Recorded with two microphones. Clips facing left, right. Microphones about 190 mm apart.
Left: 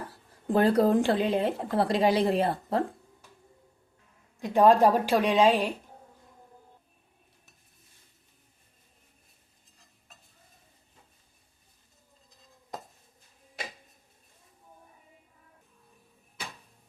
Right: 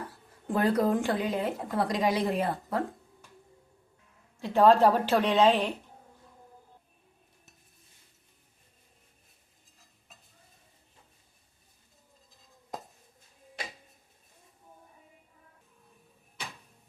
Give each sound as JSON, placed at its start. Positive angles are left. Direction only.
{"t": 0.5, "sound": "a woman's voice", "side_deg": 30}
{"t": 4.4, "sound": "a woman's voice", "side_deg": 15}